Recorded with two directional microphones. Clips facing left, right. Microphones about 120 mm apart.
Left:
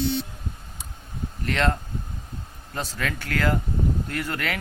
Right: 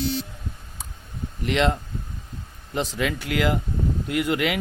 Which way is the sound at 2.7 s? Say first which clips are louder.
Right 5 dB; 15° right (ahead or behind).